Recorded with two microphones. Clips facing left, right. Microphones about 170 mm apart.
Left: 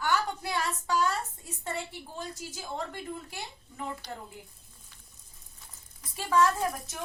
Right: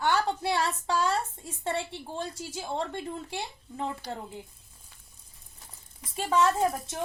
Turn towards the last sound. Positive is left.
turn(degrees=-25)  # may be behind; listen again after turning